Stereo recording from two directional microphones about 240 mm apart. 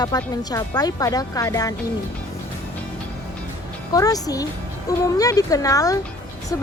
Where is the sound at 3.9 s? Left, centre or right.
Centre.